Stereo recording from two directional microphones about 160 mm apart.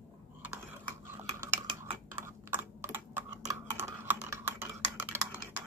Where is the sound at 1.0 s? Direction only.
15° right (ahead or behind).